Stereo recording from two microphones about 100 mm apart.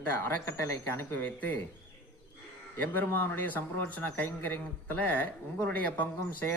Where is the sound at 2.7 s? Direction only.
20° left (ahead or behind).